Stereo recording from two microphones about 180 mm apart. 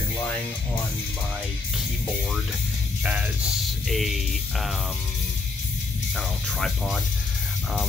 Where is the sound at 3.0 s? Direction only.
10° right (ahead or behind).